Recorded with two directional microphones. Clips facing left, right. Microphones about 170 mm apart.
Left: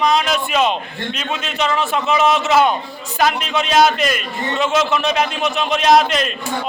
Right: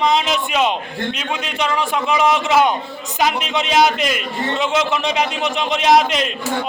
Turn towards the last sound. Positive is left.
turn(degrees=-15)  # may be behind; listen again after turning